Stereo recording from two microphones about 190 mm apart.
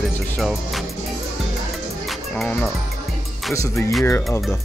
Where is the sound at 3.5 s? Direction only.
15° left (ahead or behind).